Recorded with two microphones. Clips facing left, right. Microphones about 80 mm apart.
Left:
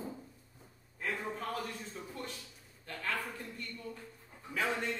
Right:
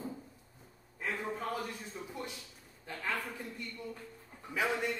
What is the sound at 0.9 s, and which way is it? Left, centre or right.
A man's voice, centre.